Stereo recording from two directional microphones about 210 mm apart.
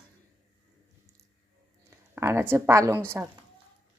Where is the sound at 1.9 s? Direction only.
15° right (ahead or behind).